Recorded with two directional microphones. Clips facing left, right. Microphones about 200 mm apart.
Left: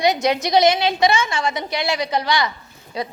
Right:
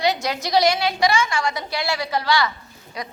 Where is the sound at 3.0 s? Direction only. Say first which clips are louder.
Left 6 dB; 30° left (ahead or behind).